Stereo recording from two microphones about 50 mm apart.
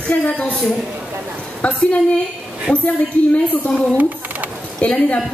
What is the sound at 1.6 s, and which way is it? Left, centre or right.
Speech, left.